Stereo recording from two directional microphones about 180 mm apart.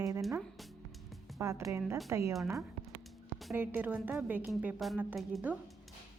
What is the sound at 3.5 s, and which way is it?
A woman's voice, 10° right (ahead or behind).